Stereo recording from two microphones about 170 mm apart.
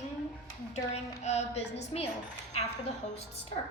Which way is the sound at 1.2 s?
40° left (ahead or behind).